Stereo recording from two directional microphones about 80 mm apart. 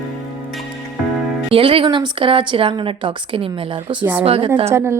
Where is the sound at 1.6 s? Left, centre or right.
Right.